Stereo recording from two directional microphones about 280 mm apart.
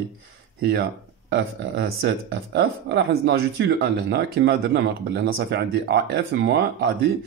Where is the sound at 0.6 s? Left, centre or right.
Right.